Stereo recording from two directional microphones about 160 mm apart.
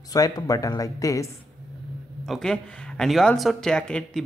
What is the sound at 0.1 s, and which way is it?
Speech, 25° left (ahead or behind).